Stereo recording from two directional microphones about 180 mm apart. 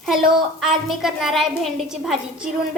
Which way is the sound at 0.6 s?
Centre (ahead or behind).